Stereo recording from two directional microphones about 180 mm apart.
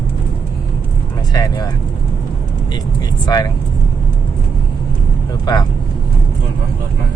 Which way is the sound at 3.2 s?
20° left (ahead or behind).